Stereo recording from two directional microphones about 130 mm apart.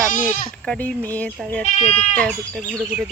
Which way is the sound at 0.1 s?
80° left.